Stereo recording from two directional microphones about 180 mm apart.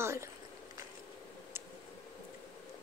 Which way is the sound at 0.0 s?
15° right (ahead or behind).